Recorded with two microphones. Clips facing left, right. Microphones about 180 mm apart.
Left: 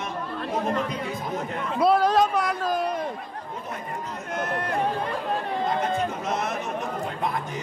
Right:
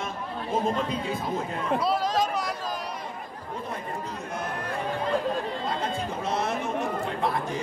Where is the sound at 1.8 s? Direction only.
55° left (ahead or behind).